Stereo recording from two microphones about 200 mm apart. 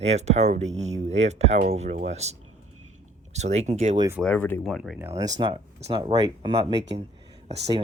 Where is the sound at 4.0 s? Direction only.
15° right (ahead or behind).